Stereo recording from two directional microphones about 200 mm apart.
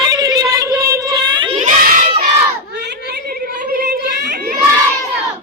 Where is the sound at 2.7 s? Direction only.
60° right (ahead or behind).